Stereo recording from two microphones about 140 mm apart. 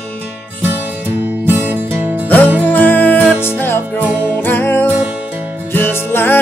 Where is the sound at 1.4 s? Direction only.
15° right (ahead or behind).